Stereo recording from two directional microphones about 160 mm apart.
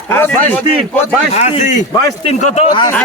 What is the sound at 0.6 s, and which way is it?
Speech, 35° right (ahead or behind).